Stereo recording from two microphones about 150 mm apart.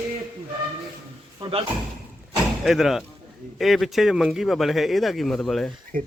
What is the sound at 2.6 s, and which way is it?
Speech, centre (ahead or behind).